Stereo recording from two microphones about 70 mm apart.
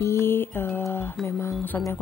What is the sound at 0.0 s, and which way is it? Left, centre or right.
Mantra, left.